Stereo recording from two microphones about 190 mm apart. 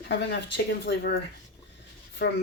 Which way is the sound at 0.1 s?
65° left (ahead or behind).